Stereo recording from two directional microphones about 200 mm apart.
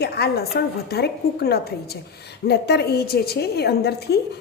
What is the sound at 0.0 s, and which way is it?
Speech, 55° left (ahead or behind).